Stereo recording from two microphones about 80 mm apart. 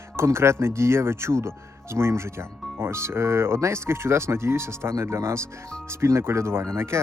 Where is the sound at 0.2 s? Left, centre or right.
Right.